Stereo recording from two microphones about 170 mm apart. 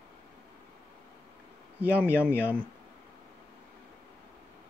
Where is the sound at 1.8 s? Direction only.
10° right (ahead or behind).